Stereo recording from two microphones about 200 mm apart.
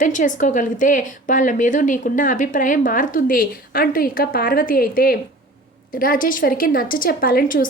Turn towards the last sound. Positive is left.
turn(degrees=45)  # may be behind; listen again after turning